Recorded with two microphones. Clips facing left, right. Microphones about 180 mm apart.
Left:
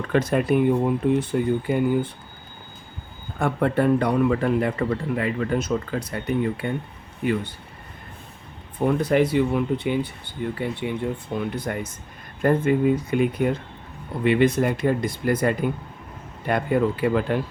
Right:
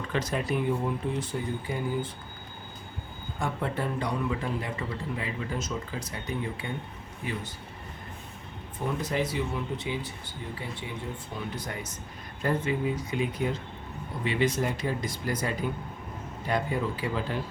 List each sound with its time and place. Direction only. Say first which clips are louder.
0.0 s speech: left 9 dB; 55° left (ahead or behind)
3.3 s speech: left 9 dB; 60° left (ahead or behind)
8.9 s speech: left 10 dB; 60° left (ahead or behind)